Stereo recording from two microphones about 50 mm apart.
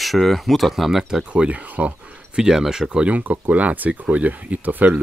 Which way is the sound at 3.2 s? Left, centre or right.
Right.